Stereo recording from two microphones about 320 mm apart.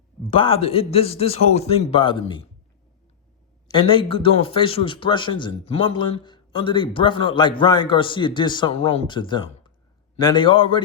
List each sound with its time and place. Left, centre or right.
0.3 s a man's voice: centre
3.7 s a man's voice: centre